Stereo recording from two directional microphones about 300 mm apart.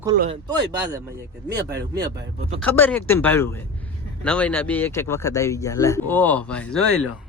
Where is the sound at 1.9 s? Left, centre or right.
Centre.